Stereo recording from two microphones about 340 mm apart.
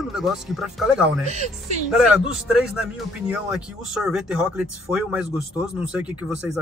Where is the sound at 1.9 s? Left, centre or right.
Centre.